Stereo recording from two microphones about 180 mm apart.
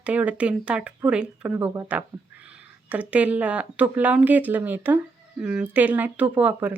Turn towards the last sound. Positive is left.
turn(degrees=-10)  # may be behind; listen again after turning